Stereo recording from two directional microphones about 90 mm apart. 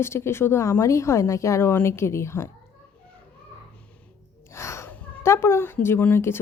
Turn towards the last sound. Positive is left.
turn(degrees=25)  # may be behind; listen again after turning